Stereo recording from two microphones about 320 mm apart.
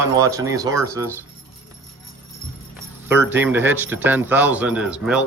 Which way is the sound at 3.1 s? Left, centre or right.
Centre.